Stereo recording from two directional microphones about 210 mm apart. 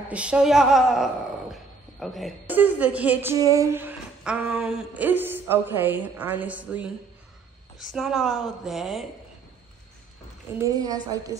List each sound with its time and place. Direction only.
0.1 s a woman's voice: 5° right (ahead or behind)
10.6 s speech: 15° right (ahead or behind)